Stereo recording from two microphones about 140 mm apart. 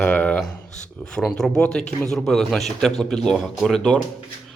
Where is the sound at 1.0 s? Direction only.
5° left (ahead or behind).